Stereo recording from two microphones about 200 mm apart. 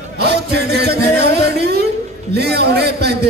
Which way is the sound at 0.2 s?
55° right (ahead or behind).